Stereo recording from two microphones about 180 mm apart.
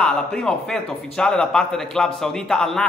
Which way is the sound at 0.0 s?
5° left (ahead or behind).